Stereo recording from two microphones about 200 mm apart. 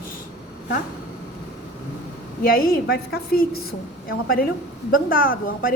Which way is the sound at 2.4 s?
45° left (ahead or behind).